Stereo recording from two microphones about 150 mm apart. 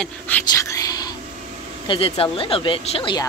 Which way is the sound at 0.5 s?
20° left (ahead or behind).